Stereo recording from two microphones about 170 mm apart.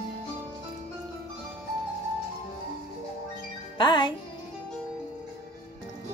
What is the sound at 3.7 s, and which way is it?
Speech, 25° left (ahead or behind).